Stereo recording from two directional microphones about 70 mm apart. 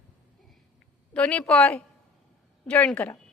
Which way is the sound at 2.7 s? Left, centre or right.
Centre.